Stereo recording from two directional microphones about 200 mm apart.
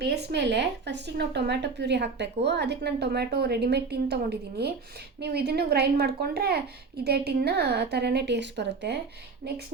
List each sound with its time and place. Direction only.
0.0 s a woman's voice: 55° right (ahead or behind)